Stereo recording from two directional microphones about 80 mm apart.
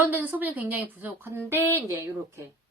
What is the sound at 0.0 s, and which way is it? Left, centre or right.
Speech, right.